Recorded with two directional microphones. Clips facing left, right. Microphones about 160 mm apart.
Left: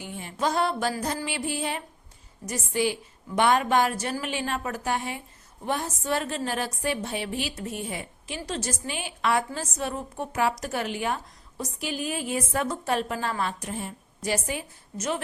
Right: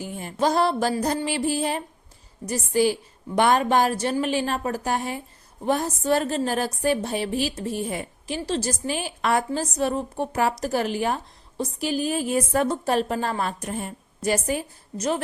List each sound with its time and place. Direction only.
0.0 s a woman's voice: 40° right (ahead or behind)
13.4 s a woman's voice: 45° right (ahead or behind)